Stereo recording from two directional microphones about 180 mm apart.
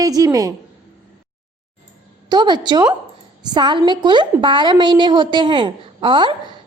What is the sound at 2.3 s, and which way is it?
A woman's voice, 25° right (ahead or behind).